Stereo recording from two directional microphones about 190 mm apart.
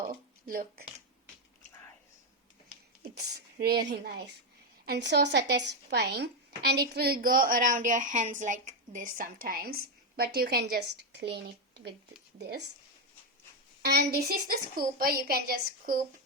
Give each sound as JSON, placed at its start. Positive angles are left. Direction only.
{"t": 0.0, "sound": "a sound", "side_deg": -45}
{"t": 3.2, "sound": "speech", "side_deg": -60}
{"t": 13.8, "sound": "a woman's voice", "side_deg": -55}